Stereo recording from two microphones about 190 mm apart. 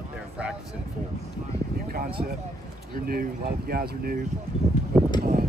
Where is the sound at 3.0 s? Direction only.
50° right (ahead or behind).